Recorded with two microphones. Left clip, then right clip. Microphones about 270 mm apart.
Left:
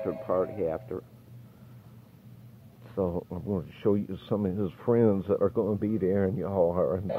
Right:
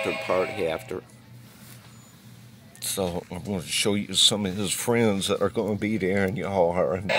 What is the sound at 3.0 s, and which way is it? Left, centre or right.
Speech, centre.